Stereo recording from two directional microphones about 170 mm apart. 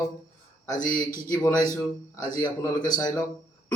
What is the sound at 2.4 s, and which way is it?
Speech, 25° left (ahead or behind).